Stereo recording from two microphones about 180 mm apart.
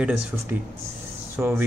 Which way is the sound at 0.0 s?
5° right (ahead or behind).